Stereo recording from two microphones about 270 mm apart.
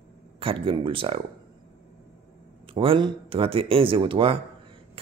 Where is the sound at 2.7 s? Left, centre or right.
Centre.